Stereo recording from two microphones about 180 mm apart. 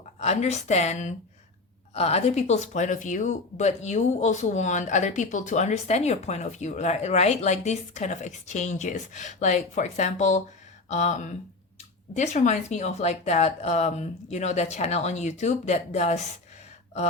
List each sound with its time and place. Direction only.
0.2 s speech: 40° left (ahead or behind)